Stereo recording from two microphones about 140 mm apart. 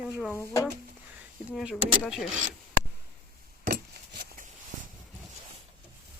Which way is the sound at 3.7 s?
90° right.